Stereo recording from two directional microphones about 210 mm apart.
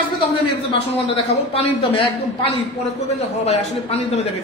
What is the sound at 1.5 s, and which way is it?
Speech, 25° left (ahead or behind).